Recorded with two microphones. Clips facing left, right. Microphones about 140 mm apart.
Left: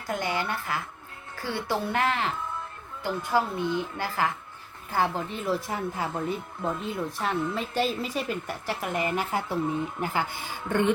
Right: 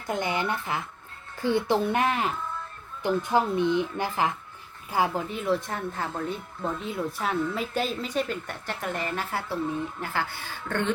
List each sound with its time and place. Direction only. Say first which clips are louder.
0.1 s a woman's voice: right 2 dB; 20° right (ahead or behind); by 6.3 s 10° left (ahead or behind)
6.8 s a woman's voice: even; centre (ahead or behind)